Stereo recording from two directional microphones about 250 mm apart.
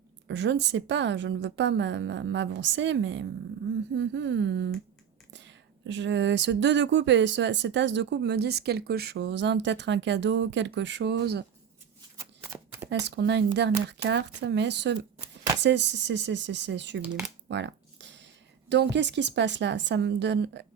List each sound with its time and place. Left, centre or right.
0.3 s speech: right
12.2 s shuffling cards: centre
13.1 s speech: right
17.0 s speech: centre
17.5 s a sound: right
18.7 s speech: right